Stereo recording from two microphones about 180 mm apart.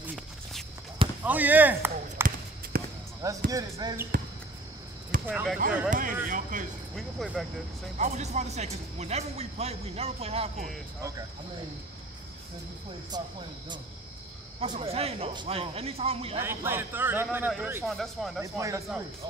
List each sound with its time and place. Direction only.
0.0 s walk: centre (ahead or behind)
1.2 s speech: 10° right (ahead or behind)
2.7 s basketball bounce: 55° right (ahead or behind)
3.2 s speech: 20° right (ahead or behind)
5.2 s speech: 5° right (ahead or behind)
5.9 s speech: 50° right (ahead or behind)
7.0 s speech: centre (ahead or behind)
8.0 s speech: 40° right (ahead or behind)
11.0 s a man's voice: 20° right (ahead or behind)
13.1 s speech: 25° right (ahead or behind)
14.6 s speech: 35° right (ahead or behind)
16.4 s a man's voice: 10° right (ahead or behind)
18.4 s a man's voice: 15° right (ahead or behind)